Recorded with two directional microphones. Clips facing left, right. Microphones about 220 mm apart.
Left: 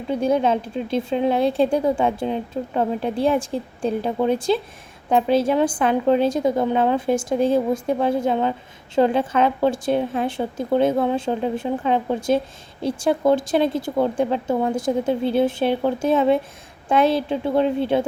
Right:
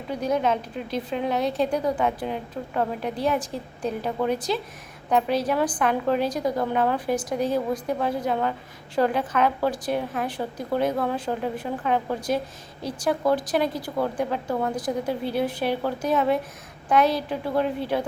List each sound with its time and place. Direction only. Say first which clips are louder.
0.1 s a woman's voice: left 5 dB; 30° left (ahead or behind)